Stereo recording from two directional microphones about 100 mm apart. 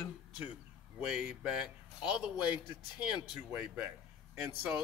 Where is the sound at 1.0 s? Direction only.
5° right (ahead or behind).